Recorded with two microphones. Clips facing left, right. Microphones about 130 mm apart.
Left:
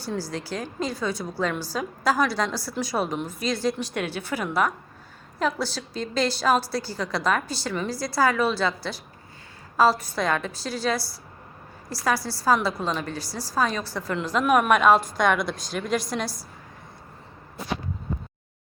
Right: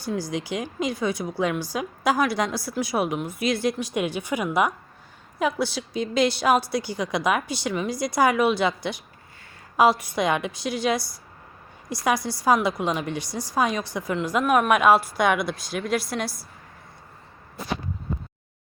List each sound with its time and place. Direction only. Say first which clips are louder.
0.2 s a woman's voice: right 3 dB; 15° right (ahead or behind)
14.4 s a woman's voice: even; centre (ahead or behind)